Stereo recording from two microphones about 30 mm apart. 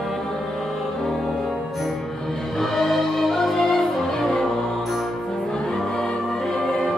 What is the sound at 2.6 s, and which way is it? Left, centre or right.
Music, centre.